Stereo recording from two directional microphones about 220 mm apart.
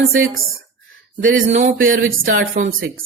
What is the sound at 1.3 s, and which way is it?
Speech, 35° right (ahead or behind).